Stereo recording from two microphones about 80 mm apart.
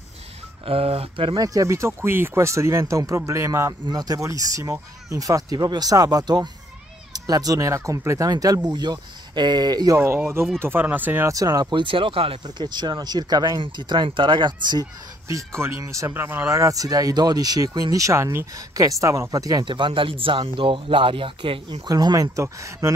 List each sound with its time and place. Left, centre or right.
1.1 s speech: right
1.4 s speech: right
3.8 s speech: right
4.2 s speech: right
7.7 s speech: right
8.3 s speech: right
9.9 s speech: right
11.2 s speech: right
11.7 s speech: right
15.2 s speech: right
16.1 s speech: right
19.6 s speech: right
21.8 s speech: right